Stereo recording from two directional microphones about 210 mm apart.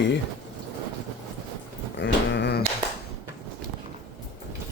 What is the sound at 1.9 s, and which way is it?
Dog, 55° left (ahead or behind).